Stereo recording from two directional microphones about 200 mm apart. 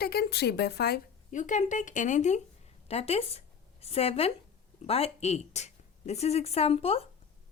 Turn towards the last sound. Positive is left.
turn(degrees=30)  # may be behind; listen again after turning